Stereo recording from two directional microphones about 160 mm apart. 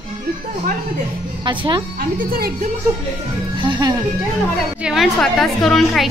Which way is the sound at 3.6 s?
30° right (ahead or behind).